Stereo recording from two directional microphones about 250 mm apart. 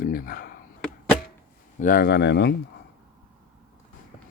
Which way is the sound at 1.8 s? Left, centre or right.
Left.